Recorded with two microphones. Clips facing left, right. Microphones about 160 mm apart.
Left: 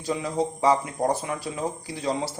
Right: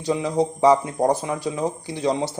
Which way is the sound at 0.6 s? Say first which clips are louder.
Right 5 dB; 25° right (ahead or behind).